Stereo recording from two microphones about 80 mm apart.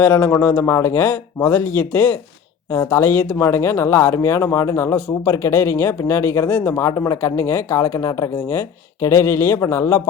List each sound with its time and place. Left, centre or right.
0.0 s speech: left
6.8 s speech: left